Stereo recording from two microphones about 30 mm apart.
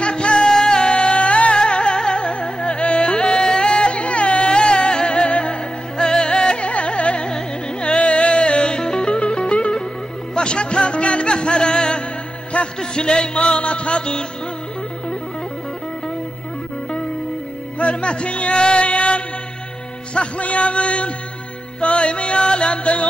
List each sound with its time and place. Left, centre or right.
0.0 s music: left
0.5 s music: centre
0.9 s music: left
1.6 s music: left
5.9 s music: left
6.7 s carnatic music: left
7.2 s music: left
12.5 s a sound: left
12.9 s music: left
17.7 s music: left